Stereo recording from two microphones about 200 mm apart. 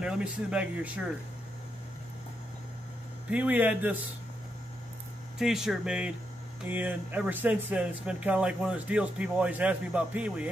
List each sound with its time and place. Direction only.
0.0 s speech: 5° right (ahead or behind)
3.3 s speech: 5° right (ahead or behind)
5.4 s speech: centre (ahead or behind)